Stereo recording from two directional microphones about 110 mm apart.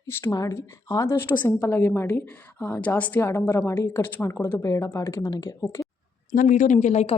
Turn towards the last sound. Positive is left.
turn(degrees=90)